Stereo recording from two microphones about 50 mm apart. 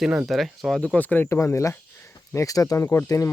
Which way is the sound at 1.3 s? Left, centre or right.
Left.